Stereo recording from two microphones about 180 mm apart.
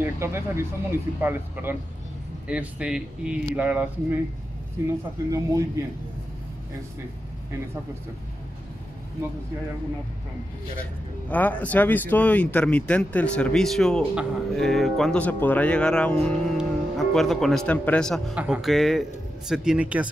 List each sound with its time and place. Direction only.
0.0 s speech: 15° right (ahead or behind)
11.2 s speech: 10° left (ahead or behind); by 20.1 s 5° right (ahead or behind)